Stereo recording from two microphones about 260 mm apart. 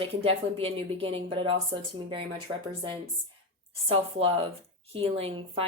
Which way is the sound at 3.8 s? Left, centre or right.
Right.